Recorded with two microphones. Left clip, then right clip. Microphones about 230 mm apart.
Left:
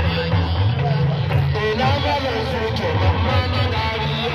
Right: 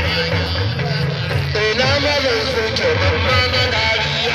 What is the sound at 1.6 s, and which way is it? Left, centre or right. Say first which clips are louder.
Music: right 4 dB; left.